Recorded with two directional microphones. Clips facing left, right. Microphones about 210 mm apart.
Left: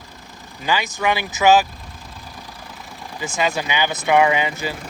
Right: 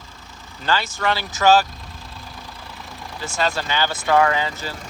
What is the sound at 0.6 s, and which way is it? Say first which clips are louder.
Speech: left 1 dB; 15° left (ahead or behind).